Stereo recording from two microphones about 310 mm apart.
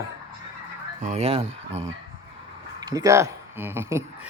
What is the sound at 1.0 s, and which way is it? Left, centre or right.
Speech, centre.